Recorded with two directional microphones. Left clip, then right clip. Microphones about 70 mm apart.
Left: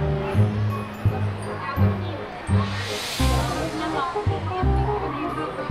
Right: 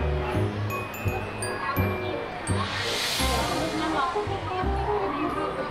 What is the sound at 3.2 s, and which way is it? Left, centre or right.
Music, centre.